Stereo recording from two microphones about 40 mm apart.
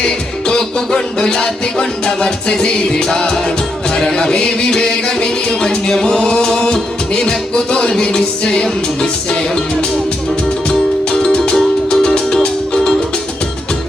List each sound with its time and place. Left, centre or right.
0.0 s music: centre
10.7 s music: centre